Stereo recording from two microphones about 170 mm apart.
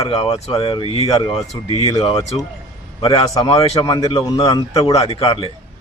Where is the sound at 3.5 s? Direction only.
35° left (ahead or behind).